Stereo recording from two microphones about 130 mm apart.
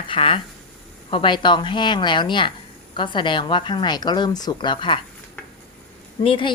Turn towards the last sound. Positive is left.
turn(degrees=40)  # may be behind; listen again after turning